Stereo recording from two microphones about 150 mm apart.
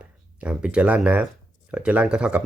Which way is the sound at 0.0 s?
10° right (ahead or behind).